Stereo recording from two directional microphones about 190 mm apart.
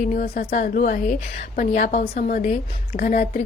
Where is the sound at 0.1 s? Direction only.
45° left (ahead or behind).